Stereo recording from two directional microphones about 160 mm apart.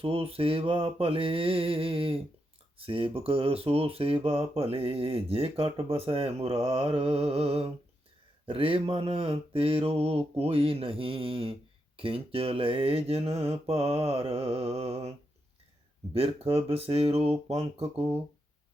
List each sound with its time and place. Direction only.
0.0 s speech: 35° right (ahead or behind)
16.1 s speech: 35° right (ahead or behind)